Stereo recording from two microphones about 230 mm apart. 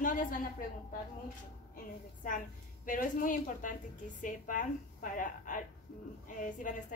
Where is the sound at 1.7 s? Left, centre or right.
Left.